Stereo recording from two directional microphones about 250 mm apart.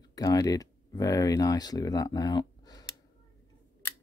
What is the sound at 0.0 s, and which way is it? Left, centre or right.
Speech, centre.